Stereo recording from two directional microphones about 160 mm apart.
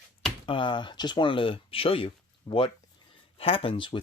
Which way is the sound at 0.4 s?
30° left (ahead or behind).